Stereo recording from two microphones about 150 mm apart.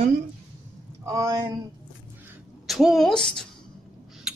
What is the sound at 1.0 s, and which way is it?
Speech, 25° right (ahead or behind).